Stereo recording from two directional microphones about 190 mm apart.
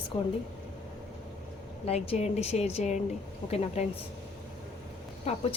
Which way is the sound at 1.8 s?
30° left (ahead or behind).